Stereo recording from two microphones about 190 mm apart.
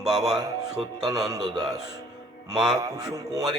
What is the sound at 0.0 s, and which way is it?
Speech, centre (ahead or behind).